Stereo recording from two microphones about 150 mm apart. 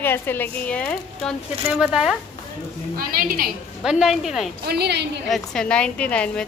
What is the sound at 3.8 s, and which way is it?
Speech, centre (ahead or behind).